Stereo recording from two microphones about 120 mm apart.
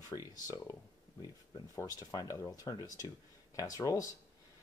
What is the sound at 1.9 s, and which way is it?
Speech, 30° left (ahead or behind).